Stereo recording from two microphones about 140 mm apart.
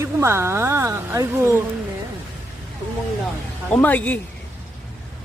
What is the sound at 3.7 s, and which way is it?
Speech, 10° left (ahead or behind).